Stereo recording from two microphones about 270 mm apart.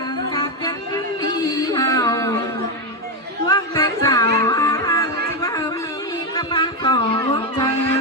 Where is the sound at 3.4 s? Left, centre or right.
Centre.